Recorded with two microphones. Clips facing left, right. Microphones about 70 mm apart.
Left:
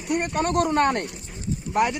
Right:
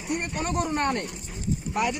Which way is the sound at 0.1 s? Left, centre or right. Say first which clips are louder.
Left 5 dB; left.